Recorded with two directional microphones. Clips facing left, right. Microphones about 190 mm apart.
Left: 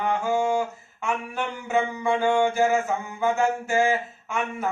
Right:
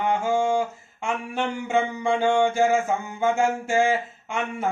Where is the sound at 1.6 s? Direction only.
25° right (ahead or behind).